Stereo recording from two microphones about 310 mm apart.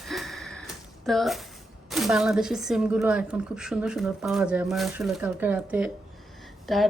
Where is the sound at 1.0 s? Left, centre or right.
Centre.